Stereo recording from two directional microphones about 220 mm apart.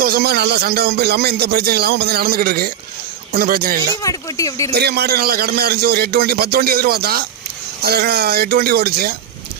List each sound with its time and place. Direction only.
0.0 s speech: 45° right (ahead or behind)
4.0 s speech: 15° left (ahead or behind)
4.7 s speech: 45° right (ahead or behind)